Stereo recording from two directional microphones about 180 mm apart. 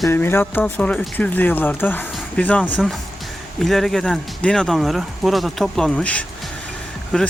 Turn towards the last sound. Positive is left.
turn(degrees=5)  # may be behind; listen again after turning